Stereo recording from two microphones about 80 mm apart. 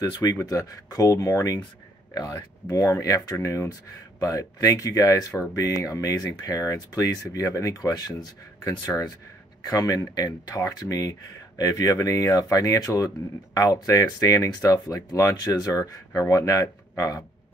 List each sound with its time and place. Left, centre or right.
0.2 s speech: left